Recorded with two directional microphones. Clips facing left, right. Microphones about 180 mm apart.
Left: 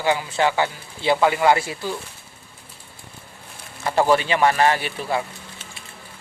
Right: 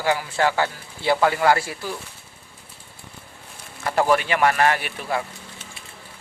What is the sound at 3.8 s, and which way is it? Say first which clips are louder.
A man's voice: left 1 dB; 25° left (ahead or behind).